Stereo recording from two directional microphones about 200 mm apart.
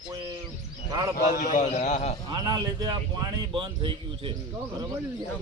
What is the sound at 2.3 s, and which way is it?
A man's voice, 20° right (ahead or behind).